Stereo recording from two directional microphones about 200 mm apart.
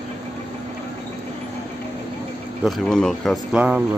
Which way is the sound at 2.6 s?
5° left (ahead or behind).